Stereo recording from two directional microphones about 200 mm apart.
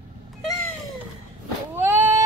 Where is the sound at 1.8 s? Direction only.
10° right (ahead or behind).